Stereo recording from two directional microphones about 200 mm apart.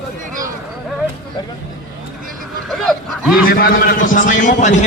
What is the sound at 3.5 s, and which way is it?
A man's voice, 45° left (ahead or behind).